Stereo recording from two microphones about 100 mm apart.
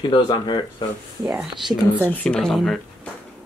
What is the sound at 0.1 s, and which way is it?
Speech, 50° left (ahead or behind).